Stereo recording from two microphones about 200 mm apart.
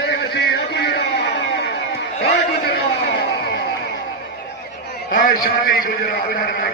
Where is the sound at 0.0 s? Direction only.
55° left (ahead or behind).